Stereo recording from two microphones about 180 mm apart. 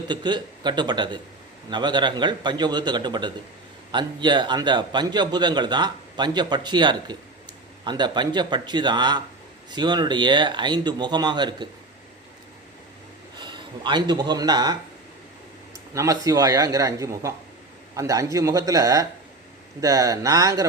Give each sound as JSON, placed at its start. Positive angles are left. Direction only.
{"t": 0.1, "sound": "a man's voice", "side_deg": -25}
{"t": 13.4, "sound": "speech", "side_deg": -25}
{"t": 16.0, "sound": "a man's voice", "side_deg": -20}